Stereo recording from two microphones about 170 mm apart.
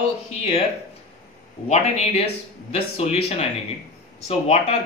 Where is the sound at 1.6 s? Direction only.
40° left (ahead or behind).